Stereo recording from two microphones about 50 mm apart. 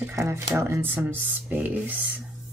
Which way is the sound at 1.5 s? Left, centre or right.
Right.